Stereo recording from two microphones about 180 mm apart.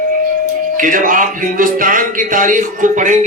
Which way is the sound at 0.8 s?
50° right (ahead or behind).